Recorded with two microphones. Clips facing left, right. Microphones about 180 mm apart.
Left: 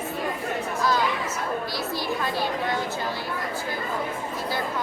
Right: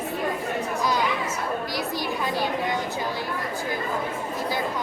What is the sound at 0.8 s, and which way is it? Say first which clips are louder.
Chatter: left 2 dB; 15° right (ahead or behind).